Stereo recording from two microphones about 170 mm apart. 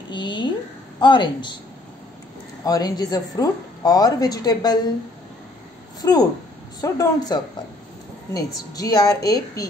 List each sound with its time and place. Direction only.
0.1 s a woman's voice: 25° left (ahead or behind)
2.6 s a woman's voice: 25° left (ahead or behind)
6.0 s a woman's voice: 20° left (ahead or behind)